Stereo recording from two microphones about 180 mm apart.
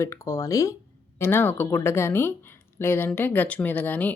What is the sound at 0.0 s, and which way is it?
Speech, 15° left (ahead or behind).